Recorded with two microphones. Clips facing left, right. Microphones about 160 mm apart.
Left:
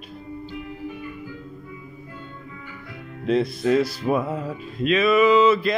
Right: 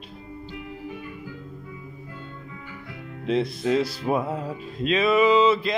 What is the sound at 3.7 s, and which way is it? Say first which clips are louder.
Music: left 2 dB; 30° right (ahead or behind).